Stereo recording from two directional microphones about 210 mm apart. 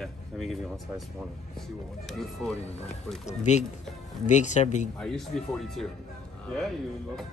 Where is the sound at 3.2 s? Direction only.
35° left (ahead or behind).